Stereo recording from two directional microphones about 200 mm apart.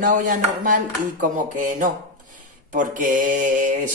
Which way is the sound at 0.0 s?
40° right (ahead or behind).